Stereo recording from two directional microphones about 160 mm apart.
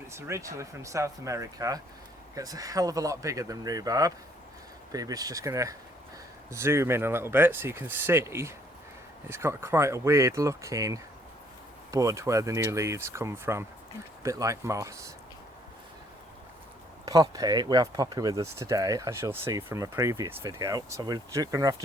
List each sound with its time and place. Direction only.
0.1 s speech: 15° right (ahead or behind)
17.1 s speech: 20° right (ahead or behind)